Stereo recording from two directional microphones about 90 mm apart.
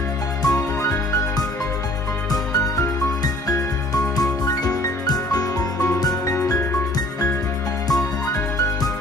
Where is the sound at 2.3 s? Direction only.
45° left (ahead or behind).